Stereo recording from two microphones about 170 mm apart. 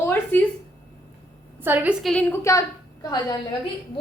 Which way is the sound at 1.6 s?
10° right (ahead or behind).